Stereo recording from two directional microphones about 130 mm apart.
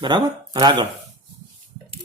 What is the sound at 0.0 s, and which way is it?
Speech, 30° right (ahead or behind).